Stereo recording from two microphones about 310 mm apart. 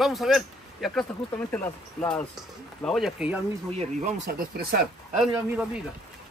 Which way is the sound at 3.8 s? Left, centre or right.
Right.